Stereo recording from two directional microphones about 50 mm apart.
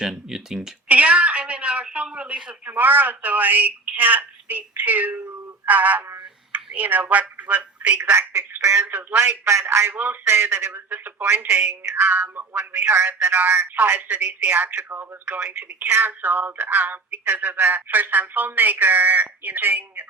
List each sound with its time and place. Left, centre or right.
0.0 s a sound: centre
0.9 s a woman's voice: right
2.6 s speech: right
8.8 s speech: right
10.2 s speech: right
10.7 s speech: right
11.4 s speech: right
15.9 s speech: right